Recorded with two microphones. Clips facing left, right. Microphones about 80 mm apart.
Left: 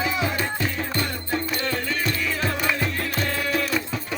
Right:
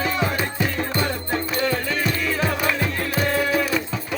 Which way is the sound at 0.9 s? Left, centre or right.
Centre.